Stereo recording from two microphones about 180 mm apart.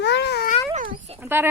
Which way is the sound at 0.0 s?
70° left (ahead or behind).